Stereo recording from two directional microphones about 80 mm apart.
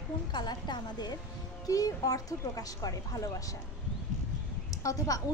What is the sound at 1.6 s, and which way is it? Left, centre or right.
Speech, left.